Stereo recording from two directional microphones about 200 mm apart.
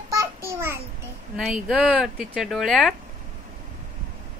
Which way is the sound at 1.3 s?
5° right (ahead or behind).